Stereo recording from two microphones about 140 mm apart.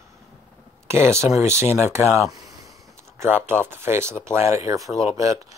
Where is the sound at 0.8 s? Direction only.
20° right (ahead or behind).